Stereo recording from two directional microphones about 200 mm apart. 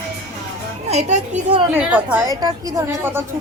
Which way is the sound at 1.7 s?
10° right (ahead or behind).